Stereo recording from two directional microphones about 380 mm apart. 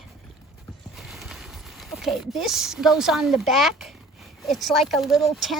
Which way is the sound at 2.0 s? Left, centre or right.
Centre.